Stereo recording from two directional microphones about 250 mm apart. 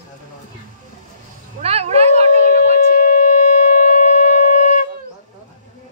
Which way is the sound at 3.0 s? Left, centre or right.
Left.